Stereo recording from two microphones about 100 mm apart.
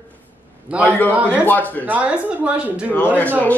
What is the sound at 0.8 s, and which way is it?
Speech, 15° left (ahead or behind).